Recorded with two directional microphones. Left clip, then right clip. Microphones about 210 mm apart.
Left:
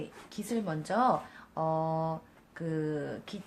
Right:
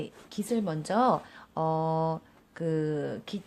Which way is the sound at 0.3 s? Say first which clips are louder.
Right 4 dB; 40° right (ahead or behind).